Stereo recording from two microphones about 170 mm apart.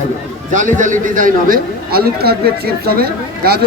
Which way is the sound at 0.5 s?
50° right (ahead or behind).